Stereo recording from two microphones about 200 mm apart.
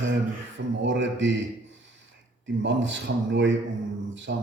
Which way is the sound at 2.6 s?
65° right (ahead or behind).